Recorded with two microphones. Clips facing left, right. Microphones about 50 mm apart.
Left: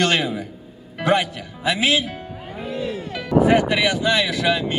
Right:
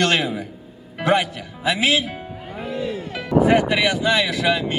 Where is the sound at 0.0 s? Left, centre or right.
Centre.